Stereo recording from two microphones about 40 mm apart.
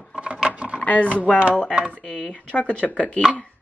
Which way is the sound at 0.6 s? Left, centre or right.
Right.